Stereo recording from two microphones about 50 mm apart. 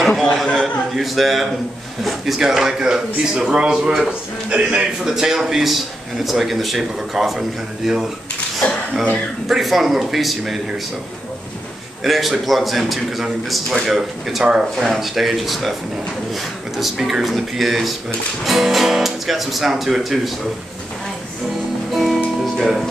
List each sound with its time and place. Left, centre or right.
0.0 s a sound: centre
0.6 s a man's voice: centre; by 4.8 s right
5.0 s speech: centre
9.5 s speech: centre
12.0 s speech: centre
16.7 s speech: centre
22.1 s music: centre